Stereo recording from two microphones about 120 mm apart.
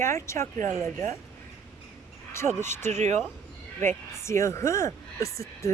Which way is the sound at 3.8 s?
20° left (ahead or behind).